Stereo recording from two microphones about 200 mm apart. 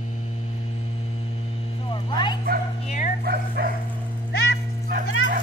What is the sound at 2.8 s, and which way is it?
Dog, 35° left (ahead or behind).